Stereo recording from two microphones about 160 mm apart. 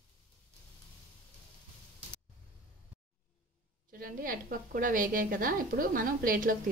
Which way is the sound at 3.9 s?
60° right (ahead or behind).